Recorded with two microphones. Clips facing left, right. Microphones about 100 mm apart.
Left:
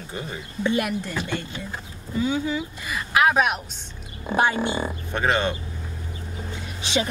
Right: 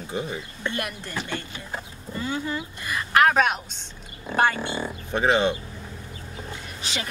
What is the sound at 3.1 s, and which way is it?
Speech, 10° left (ahead or behind).